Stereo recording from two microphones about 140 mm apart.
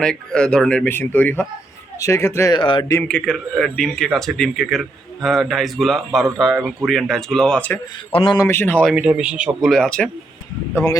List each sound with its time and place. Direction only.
0.0 s speech: 5° left (ahead or behind)
2.6 s a man's voice: 35° left (ahead or behind)
3.0 s speech: 10° left (ahead or behind)
8.1 s a man's voice: 35° left (ahead or behind)
8.4 s speech: 15° left (ahead or behind)
8.9 s speech: 5° right (ahead or behind)
9.6 s speech: centre (ahead or behind)